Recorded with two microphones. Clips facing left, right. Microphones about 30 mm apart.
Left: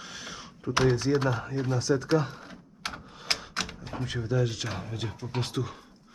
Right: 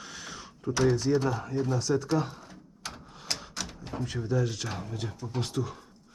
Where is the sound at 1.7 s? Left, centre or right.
Centre.